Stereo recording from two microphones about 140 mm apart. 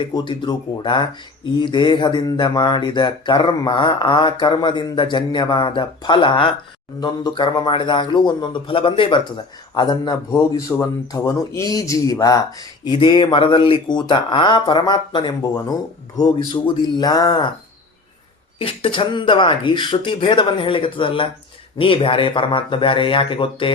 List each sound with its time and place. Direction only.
0.0 s speech: 35° left (ahead or behind)
10.3 s speech: 20° left (ahead or behind)
18.6 s speech: 40° left (ahead or behind)